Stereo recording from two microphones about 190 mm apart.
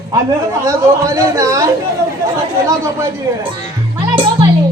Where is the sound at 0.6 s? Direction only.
15° right (ahead or behind).